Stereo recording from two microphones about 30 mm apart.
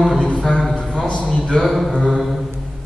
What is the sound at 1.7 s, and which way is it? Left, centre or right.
Speech, centre.